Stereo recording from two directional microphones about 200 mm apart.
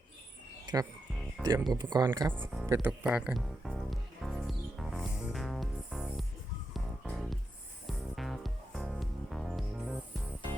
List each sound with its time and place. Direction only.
0.6 s music: 20° right (ahead or behind)
1.4 s speech: 20° right (ahead or behind)
2.4 s speech: centre (ahead or behind)
2.6 s speech: 15° right (ahead or behind)
3.0 s music: 5° right (ahead or behind)